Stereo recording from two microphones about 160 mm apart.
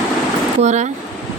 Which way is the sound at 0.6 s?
45° right (ahead or behind).